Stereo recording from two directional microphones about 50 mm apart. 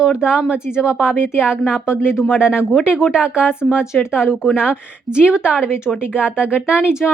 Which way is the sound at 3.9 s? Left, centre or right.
Left.